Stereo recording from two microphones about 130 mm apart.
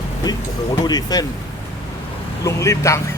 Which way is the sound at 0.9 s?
30° left (ahead or behind).